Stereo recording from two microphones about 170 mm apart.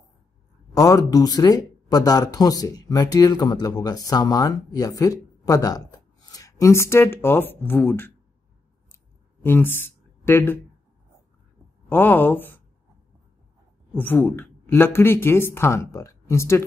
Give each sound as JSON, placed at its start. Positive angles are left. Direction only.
{"t": 0.7, "sound": "speech", "side_deg": 20}
{"t": 9.4, "sound": "speech", "side_deg": 10}
{"t": 11.9, "sound": "speech", "side_deg": 10}
{"t": 13.9, "sound": "speech", "side_deg": 10}